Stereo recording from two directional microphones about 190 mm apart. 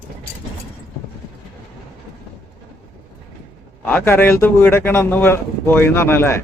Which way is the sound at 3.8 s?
10° left (ahead or behind).